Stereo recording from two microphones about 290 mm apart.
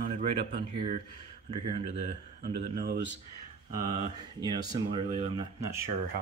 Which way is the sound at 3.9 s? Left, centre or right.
Centre.